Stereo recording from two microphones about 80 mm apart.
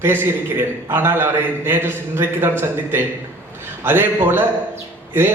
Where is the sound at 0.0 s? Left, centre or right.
Right.